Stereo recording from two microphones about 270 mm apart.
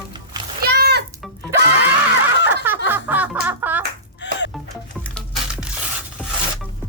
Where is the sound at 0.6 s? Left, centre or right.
Right.